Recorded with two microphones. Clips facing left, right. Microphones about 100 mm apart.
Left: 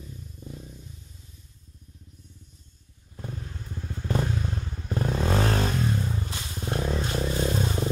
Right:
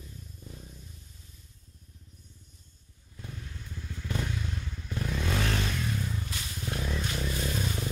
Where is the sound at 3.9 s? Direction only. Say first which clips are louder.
Left 7 dB; 35° left (ahead or behind).